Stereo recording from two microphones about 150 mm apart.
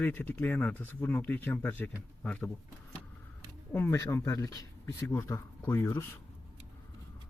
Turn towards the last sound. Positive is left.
turn(degrees=15)  # may be behind; listen again after turning